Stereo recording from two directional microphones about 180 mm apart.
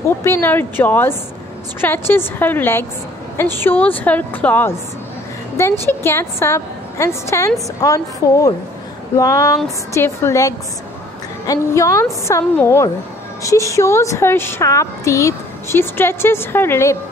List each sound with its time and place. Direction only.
0.2 s a woman's voice: 15° left (ahead or behind)